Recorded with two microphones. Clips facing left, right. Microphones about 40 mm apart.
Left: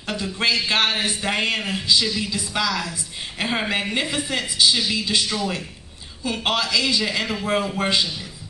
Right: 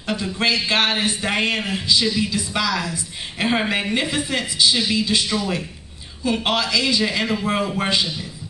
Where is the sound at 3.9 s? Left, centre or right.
Right.